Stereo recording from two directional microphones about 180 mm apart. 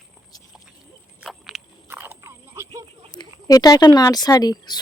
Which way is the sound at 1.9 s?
15° right (ahead or behind).